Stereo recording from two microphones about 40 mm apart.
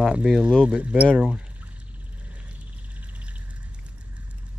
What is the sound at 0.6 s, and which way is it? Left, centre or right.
Speech, right.